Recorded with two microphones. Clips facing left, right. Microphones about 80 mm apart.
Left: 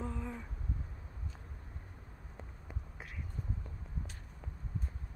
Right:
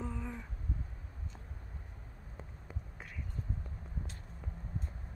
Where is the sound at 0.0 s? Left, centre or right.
Centre.